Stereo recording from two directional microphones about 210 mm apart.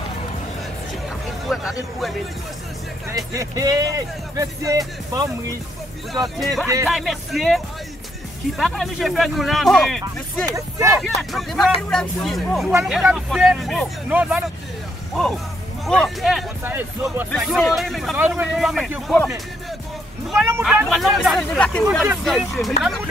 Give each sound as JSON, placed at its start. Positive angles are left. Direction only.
{"t": 1.5, "sound": "speech", "side_deg": 0}
{"t": 3.1, "sound": "speech", "side_deg": -15}
{"t": 6.2, "sound": "speech", "side_deg": 0}
{"t": 10.4, "sound": "speech", "side_deg": -15}
{"t": 11.0, "sound": "speech", "side_deg": 0}
{"t": 15.8, "sound": "speech", "side_deg": 0}